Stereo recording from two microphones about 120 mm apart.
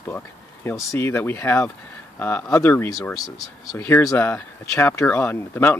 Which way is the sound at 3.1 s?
Centre (ahead or behind).